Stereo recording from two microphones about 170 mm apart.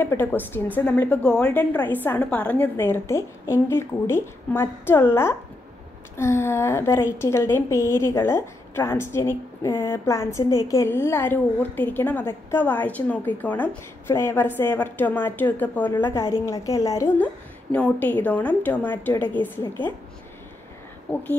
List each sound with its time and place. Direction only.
0.0 s a woman's voice: 10° left (ahead or behind)
21.1 s a woman's voice: 10° left (ahead or behind)